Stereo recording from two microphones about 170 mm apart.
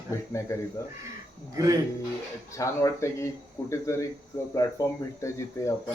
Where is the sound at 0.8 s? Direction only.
20° left (ahead or behind).